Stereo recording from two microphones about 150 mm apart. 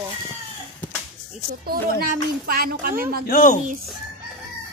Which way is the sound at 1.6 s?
80° right.